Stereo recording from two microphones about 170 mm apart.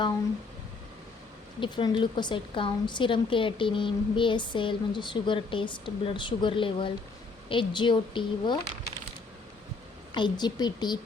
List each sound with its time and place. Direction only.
1.6 s a woman's voice: 30° left (ahead or behind)
10.2 s a woman's voice: 25° left (ahead or behind)